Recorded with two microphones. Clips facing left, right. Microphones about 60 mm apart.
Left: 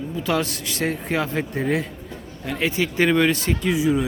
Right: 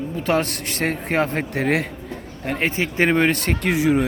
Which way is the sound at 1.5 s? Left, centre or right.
Right.